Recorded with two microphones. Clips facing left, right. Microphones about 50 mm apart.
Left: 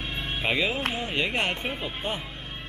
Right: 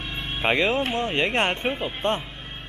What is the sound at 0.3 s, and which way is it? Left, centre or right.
Speech, right.